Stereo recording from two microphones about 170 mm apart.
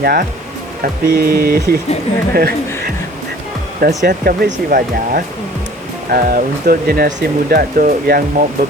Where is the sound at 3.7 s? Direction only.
55° right (ahead or behind).